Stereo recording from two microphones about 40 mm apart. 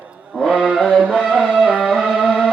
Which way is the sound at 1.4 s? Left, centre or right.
Left.